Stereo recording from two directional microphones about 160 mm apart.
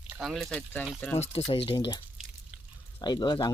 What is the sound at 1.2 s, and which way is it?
Speech, 40° left (ahead or behind).